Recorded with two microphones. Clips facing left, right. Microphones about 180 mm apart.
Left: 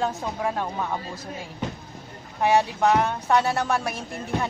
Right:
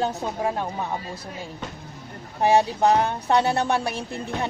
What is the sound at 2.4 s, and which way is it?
A woman's voice, 30° right (ahead or behind).